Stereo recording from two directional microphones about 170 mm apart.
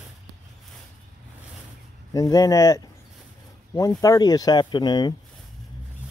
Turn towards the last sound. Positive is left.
turn(degrees=25)  # may be behind; listen again after turning